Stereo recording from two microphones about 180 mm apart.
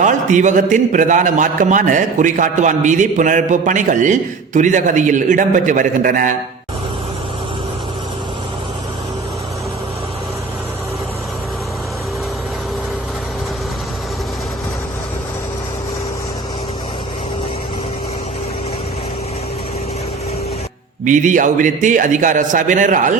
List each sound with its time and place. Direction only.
0.0 s a man's voice: 45° right (ahead or behind)
21.0 s a man's voice: 45° right (ahead or behind)